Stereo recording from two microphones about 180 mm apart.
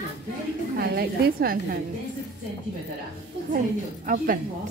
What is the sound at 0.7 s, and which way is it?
A woman's voice, 60° right (ahead or behind).